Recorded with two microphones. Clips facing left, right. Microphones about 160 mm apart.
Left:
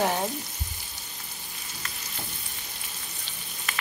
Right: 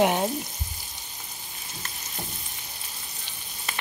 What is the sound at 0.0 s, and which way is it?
Frying, 15° right (ahead or behind).